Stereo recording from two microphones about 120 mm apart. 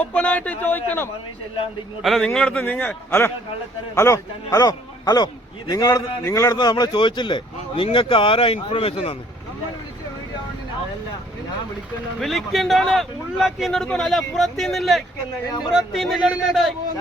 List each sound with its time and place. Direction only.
0.0 s a man's voice: 10° left (ahead or behind)
2.0 s a man's voice: centre (ahead or behind); by 9.1 s 50° left (ahead or behind)
12.2 s speech: centre (ahead or behind)
15.4 s speech: 35° left (ahead or behind)
15.7 s speech: centre (ahead or behind)